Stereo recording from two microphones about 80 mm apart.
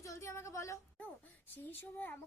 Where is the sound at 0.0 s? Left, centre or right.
Left.